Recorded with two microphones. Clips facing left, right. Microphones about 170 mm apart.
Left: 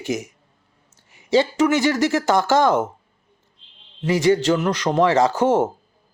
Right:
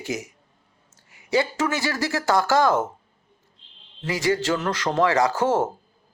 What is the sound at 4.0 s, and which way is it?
A man's voice, 20° left (ahead or behind).